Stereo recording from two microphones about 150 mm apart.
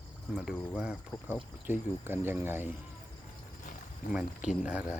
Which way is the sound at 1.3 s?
15° right (ahead or behind).